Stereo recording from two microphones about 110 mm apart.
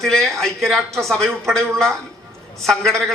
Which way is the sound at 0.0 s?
5° left (ahead or behind).